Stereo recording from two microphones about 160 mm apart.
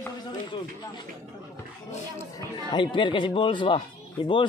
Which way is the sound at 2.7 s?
30° left (ahead or behind).